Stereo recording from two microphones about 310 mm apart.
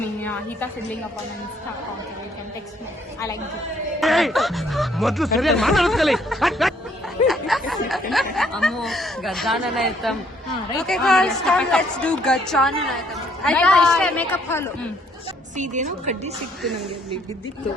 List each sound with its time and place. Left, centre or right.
0.2 s speech: centre
4.0 s speech: centre
7.3 s a sound: centre
8.1 s speech: centre
15.5 s a woman's voice: right